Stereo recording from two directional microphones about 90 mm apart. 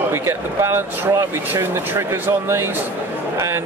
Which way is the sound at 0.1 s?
30° right (ahead or behind).